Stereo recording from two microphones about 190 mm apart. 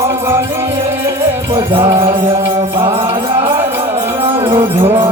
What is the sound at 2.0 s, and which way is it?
Mantra, 30° right (ahead or behind).